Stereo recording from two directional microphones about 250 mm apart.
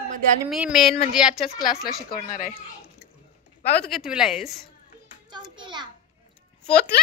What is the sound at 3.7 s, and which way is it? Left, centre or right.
Speech, centre.